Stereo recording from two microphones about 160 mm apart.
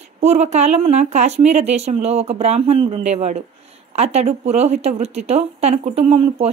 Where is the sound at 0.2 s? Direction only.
45° right (ahead or behind).